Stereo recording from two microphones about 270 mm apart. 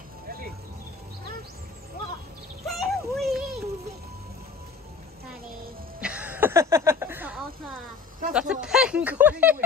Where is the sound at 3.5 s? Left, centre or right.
Right.